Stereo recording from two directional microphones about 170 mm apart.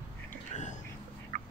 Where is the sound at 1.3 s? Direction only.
45° right (ahead or behind).